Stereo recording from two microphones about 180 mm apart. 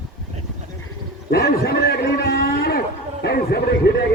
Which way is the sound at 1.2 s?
60° left (ahead or behind).